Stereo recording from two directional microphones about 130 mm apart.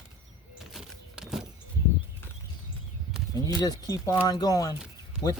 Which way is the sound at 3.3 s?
30° left (ahead or behind).